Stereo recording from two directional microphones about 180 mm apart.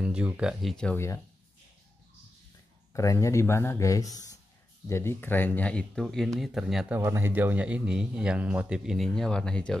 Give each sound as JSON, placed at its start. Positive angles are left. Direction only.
{"t": 0.0, "sound": "speech", "side_deg": -5}
{"t": 2.9, "sound": "speech", "side_deg": 15}
{"t": 7.0, "sound": "speech", "side_deg": -15}